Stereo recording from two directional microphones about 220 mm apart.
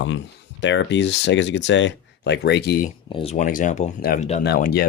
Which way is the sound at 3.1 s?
25° left (ahead or behind).